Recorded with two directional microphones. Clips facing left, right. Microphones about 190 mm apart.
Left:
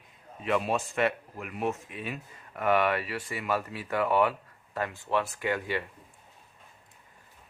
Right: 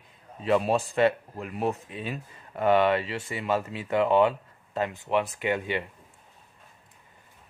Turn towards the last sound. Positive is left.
turn(degrees=-20)  # may be behind; listen again after turning